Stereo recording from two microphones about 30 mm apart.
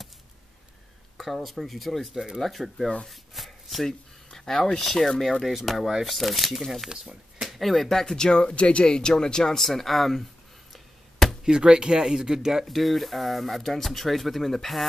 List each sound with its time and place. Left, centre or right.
1.1 s speech: centre
3.1 s chopping: centre
4.5 s speech: centre
8.0 s speech: centre
8.3 s speech: left
8.8 s speech: left
9.6 s speech: centre
10.7 s a sound: centre
11.4 s speech: right
12.6 s speech: centre